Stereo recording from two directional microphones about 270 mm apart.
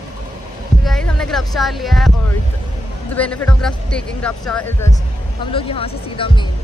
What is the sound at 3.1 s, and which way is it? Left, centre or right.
Speech, centre.